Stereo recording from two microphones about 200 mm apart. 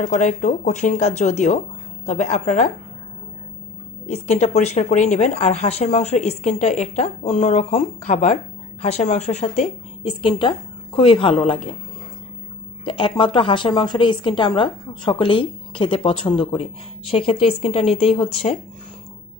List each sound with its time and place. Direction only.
0.0 s speech: 40° left (ahead or behind)
4.1 s a woman's voice: 35° left (ahead or behind)
12.8 s a woman's voice: 25° left (ahead or behind)